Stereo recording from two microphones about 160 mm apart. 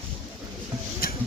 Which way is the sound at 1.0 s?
70° left (ahead or behind).